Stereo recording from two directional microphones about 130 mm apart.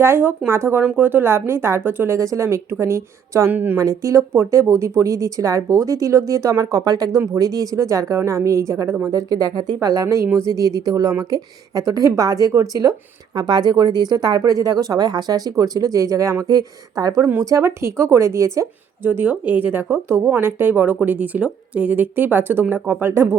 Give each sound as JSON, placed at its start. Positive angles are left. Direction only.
{"t": 0.0, "sound": "a woman's voice", "side_deg": -20}